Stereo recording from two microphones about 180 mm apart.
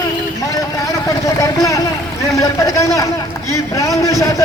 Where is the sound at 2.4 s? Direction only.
20° left (ahead or behind).